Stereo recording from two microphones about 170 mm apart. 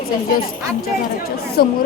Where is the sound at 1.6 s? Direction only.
65° left (ahead or behind).